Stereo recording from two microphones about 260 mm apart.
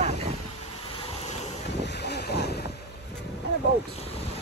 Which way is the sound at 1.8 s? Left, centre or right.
Left.